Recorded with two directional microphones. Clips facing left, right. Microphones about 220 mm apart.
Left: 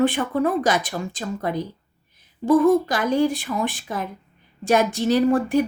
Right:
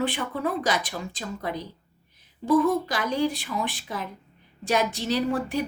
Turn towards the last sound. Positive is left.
turn(degrees=50)  # may be behind; listen again after turning